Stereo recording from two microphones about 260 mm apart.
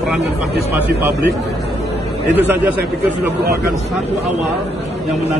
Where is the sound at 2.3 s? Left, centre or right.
Centre.